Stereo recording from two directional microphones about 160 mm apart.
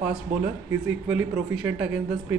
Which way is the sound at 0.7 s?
10° right (ahead or behind).